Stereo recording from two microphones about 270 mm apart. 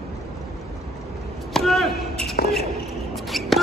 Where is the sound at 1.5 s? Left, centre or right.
Centre.